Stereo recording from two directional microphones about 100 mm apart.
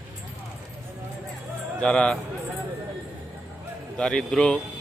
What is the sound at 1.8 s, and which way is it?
Speech, 10° left (ahead or behind).